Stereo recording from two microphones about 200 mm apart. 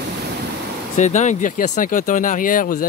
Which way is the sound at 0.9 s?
35° left (ahead or behind).